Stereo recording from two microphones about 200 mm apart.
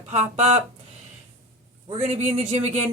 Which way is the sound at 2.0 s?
35° right (ahead or behind).